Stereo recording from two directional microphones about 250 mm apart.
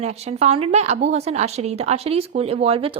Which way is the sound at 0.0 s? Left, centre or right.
Right.